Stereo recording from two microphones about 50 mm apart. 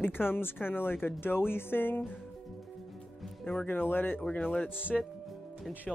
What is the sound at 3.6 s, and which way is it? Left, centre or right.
Speech, left.